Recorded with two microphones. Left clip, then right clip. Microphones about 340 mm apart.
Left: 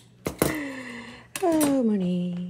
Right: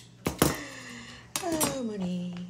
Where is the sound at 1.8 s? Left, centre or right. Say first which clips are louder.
Left 9 dB; left.